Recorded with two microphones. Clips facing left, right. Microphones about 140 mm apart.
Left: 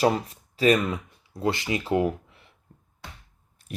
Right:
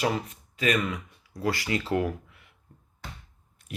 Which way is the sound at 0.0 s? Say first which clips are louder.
Left 5 dB; 35° left (ahead or behind).